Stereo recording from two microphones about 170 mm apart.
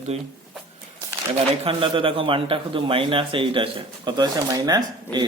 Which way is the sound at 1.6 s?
30° right (ahead or behind).